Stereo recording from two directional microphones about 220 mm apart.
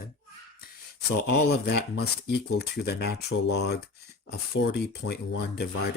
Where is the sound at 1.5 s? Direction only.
45° left (ahead or behind).